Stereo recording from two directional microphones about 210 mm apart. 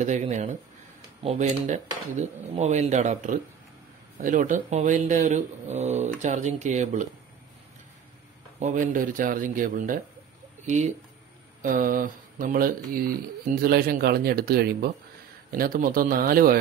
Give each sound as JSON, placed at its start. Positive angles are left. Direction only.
{"t": 0.0, "sound": "speech", "side_deg": -35}
{"t": 8.5, "sound": "speech", "side_deg": -35}